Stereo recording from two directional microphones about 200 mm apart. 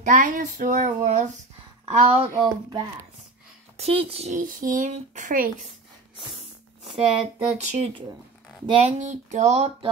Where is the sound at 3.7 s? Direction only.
30° right (ahead or behind).